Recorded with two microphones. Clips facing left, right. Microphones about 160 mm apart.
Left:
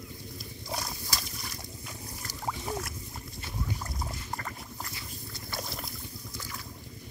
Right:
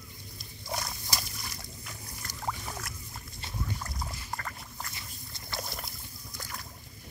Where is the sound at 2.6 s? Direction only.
25° left (ahead or behind).